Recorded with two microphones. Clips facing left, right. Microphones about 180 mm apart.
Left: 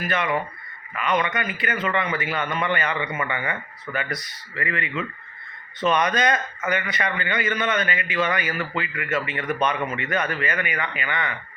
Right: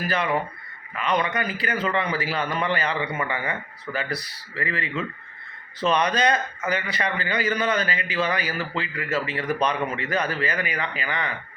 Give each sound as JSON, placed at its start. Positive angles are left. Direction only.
{"t": 0.1, "sound": "a man's voice", "side_deg": -30}